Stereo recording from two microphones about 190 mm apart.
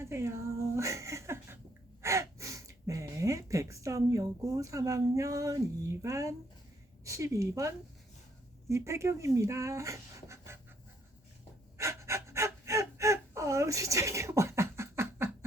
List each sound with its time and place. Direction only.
0.0 s a sound: 15° right (ahead or behind)
2.0 s a woman's voice: 15° right (ahead or behind)
8.7 s speech: 15° right (ahead or behind)
11.8 s gasp: 15° right (ahead or behind)